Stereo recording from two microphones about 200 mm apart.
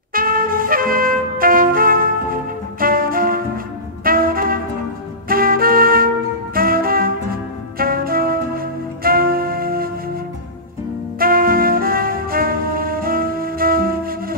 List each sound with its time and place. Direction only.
0.1 s music: 45° right (ahead or behind)
11.1 s music: 45° right (ahead or behind)